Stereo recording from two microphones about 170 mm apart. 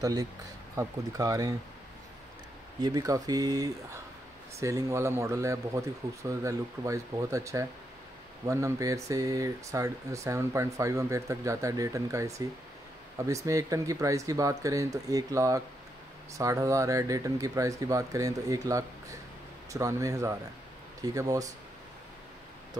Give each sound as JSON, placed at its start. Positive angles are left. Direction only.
{"t": 0.0, "sound": "speech", "side_deg": -20}
{"t": 2.8, "sound": "speech", "side_deg": -20}
{"t": 13.5, "sound": "speech", "side_deg": -20}